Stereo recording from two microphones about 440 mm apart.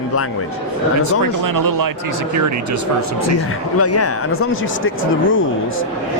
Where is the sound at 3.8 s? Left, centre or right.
Left.